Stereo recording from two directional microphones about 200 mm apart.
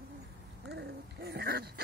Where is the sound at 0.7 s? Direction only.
55° right (ahead or behind).